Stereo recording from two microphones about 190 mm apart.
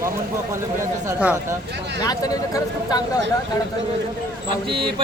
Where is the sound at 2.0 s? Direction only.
20° left (ahead or behind).